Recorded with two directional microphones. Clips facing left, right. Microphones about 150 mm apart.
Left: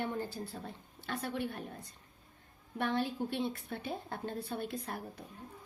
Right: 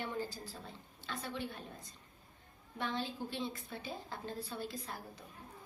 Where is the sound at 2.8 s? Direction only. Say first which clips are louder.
Left 5 dB; 60° left (ahead or behind).